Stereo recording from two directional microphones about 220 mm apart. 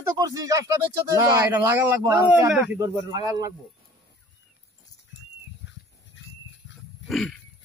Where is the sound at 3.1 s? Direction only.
20° right (ahead or behind).